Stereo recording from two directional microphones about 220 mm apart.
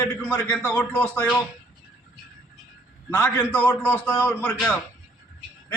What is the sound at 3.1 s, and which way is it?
A man's voice, 10° left (ahead or behind).